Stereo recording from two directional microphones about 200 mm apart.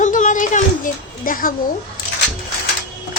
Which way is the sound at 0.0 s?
40° left (ahead or behind).